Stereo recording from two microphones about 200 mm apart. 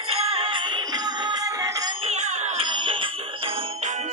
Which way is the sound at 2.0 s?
35° right (ahead or behind).